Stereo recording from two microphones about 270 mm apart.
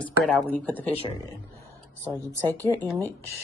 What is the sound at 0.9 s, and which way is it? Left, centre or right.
Speech, left.